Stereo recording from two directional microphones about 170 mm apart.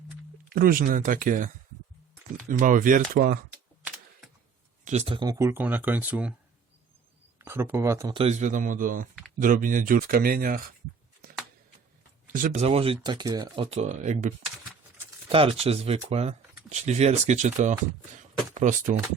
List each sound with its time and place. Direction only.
0.5 s speech: 60° right (ahead or behind)
2.5 s speech: 50° right (ahead or behind)
4.9 s speech: 35° right (ahead or behind); by 6.3 s 10° right (ahead or behind)
7.3 s speech: 15° right (ahead or behind)
8.1 s speech: 40° right (ahead or behind); by 10.6 s 60° right (ahead or behind)
12.3 s speech: 50° right (ahead or behind)
12.6 s speech: 35° right (ahead or behind)
13.7 s speech: 45° right (ahead or behind)
15.3 s speech: 35° right (ahead or behind)